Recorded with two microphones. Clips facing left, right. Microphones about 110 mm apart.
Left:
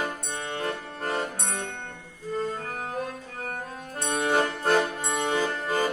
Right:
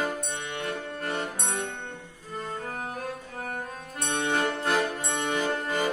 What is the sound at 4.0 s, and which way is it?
Music, 35° left (ahead or behind).